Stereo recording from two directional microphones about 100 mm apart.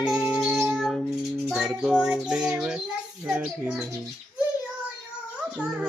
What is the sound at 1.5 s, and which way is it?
Bird, 5° right (ahead or behind).